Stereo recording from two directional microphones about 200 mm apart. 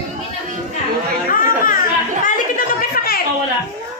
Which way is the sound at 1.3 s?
45° left (ahead or behind).